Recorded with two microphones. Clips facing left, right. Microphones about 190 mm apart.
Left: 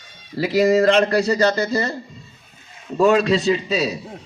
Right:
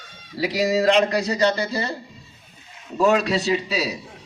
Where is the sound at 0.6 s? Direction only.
55° left (ahead or behind).